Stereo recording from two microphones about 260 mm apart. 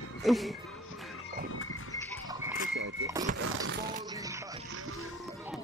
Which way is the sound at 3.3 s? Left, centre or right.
Right.